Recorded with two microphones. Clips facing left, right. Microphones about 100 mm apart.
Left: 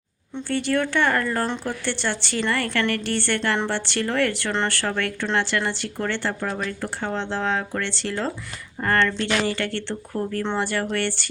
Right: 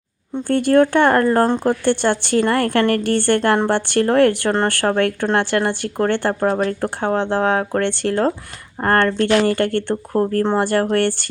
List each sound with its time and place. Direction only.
0.3 s speech: 50° right (ahead or behind)